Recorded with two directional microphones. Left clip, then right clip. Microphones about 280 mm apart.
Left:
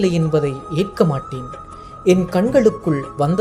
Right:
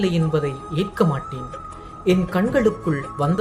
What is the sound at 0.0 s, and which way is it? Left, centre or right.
Speech, centre.